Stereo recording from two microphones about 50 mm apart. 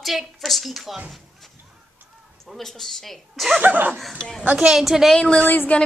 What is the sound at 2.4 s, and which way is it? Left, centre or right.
A woman's voice, centre.